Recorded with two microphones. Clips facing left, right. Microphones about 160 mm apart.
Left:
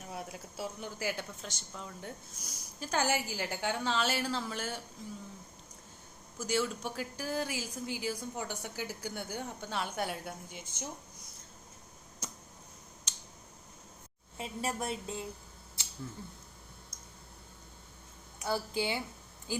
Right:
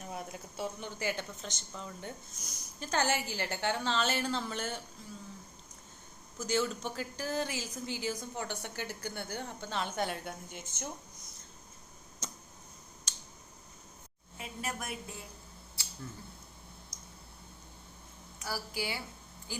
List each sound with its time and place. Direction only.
0.0 s speech: 5° left (ahead or behind)
6.4 s speech: 5° left (ahead or behind)
10.5 s speech: 50° right (ahead or behind)
12.2 s tick-tock: 5° left (ahead or behind)
13.1 s a sound: 20° left (ahead or behind)
14.3 s a woman's voice: 30° left (ahead or behind)
15.8 s a sound: 20° left (ahead or behind)
18.4 s a woman's voice: 25° left (ahead or behind)